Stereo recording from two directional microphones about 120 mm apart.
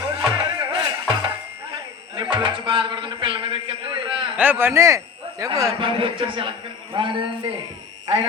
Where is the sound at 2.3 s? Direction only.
40° right (ahead or behind).